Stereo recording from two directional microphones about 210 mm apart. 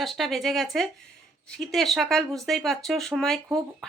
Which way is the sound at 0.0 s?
Centre (ahead or behind).